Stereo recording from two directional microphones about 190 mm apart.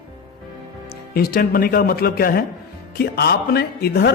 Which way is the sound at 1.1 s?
50° left (ahead or behind).